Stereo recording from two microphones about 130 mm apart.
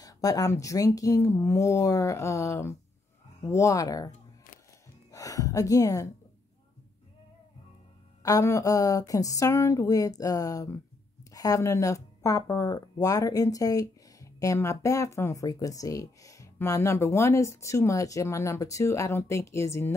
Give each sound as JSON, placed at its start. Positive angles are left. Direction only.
{"t": 0.0, "sound": "speech", "side_deg": 30}
{"t": 5.1, "sound": "a sound", "side_deg": 25}
{"t": 8.2, "sound": "speech", "side_deg": 25}